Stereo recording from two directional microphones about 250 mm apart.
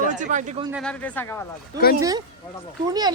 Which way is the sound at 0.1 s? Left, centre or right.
Right.